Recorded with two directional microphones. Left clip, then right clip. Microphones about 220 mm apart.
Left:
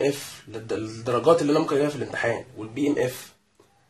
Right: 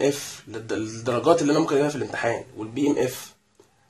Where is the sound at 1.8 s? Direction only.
40° right (ahead or behind).